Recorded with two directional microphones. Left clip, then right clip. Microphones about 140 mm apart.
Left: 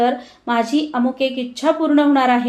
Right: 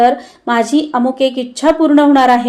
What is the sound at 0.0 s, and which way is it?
Speech, 35° right (ahead or behind).